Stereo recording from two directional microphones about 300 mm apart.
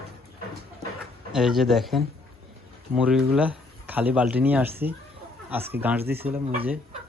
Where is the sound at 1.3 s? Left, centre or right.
Centre.